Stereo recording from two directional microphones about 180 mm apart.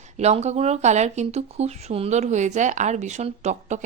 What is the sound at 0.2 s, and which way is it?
A woman's voice, 35° right (ahead or behind).